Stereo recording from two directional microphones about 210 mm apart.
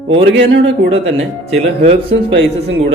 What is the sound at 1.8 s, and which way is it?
Speech, 25° right (ahead or behind).